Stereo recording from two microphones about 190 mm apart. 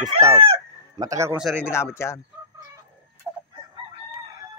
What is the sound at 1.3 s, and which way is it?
Speech, centre (ahead or behind).